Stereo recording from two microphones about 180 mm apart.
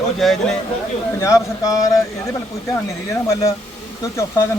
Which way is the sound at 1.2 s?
20° left (ahead or behind).